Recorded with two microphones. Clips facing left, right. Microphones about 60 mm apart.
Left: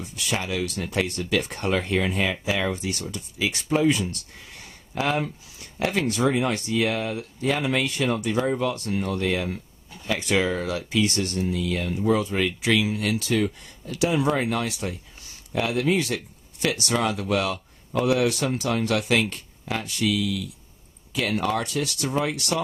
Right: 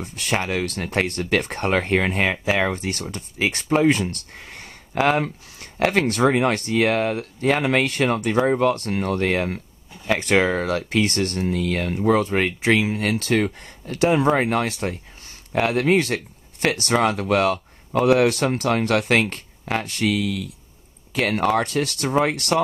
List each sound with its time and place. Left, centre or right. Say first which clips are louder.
0.0 s speech: right 4 dB; right